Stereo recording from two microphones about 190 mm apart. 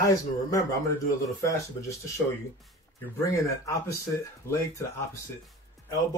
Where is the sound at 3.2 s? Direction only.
15° left (ahead or behind).